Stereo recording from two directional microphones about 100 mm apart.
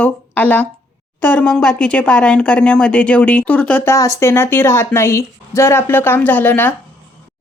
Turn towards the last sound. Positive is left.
turn(degrees=20)  # may be behind; listen again after turning